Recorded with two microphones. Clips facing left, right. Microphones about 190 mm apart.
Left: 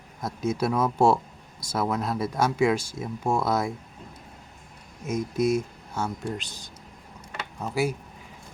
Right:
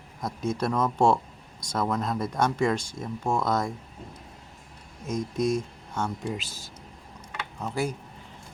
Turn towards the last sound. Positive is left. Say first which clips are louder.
# left 3 dB
turn(degrees=5)  # may be behind; listen again after turning